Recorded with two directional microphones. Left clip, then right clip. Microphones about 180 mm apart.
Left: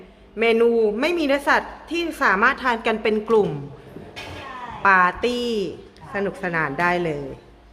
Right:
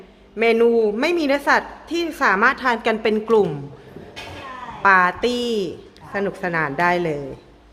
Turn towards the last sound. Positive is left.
turn(degrees=-15)  # may be behind; listen again after turning